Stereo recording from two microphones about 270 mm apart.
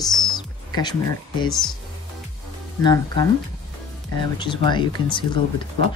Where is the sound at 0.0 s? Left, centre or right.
Centre.